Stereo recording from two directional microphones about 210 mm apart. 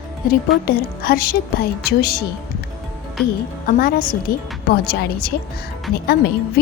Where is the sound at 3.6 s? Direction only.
45° left (ahead or behind).